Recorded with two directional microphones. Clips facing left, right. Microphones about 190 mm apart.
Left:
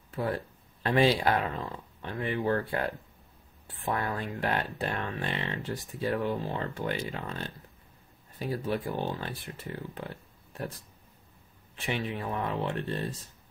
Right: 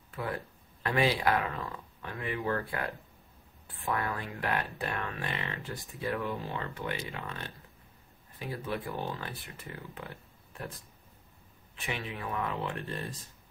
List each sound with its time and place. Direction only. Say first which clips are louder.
0.1 s speech: left 5 dB; 30° left (ahead or behind)
11.8 s speech: left 5 dB; 30° left (ahead or behind)